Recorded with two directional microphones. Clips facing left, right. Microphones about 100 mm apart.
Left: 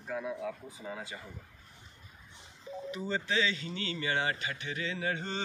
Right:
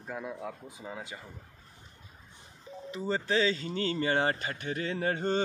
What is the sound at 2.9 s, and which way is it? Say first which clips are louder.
Speech: right 4 dB; 35° right (ahead or behind).